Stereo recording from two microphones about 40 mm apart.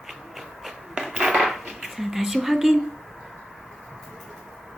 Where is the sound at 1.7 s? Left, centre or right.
Centre.